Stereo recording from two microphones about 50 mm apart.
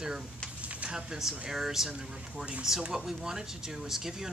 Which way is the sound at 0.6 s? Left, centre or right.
Right.